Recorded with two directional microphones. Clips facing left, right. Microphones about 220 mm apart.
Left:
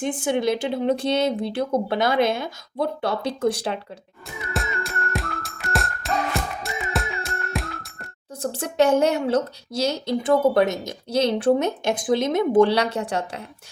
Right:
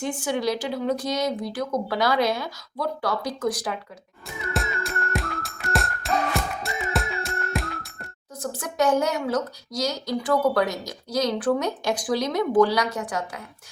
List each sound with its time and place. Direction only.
0.3 s speech: 25° left (ahead or behind)
4.5 s music: centre (ahead or behind)
8.4 s speech: 30° left (ahead or behind)